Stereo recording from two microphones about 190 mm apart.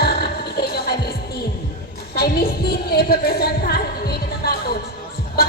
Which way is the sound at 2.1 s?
55° left (ahead or behind).